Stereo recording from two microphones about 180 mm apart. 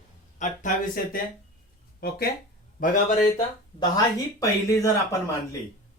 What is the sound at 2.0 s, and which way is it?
Speech, 55° left (ahead or behind).